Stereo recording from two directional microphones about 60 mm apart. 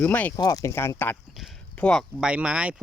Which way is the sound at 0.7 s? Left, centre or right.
Left.